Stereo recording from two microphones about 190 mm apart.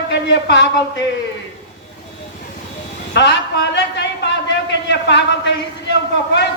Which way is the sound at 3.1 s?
65° left (ahead or behind).